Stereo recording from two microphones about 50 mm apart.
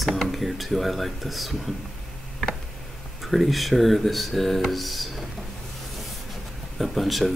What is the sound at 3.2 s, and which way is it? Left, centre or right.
Speech, centre.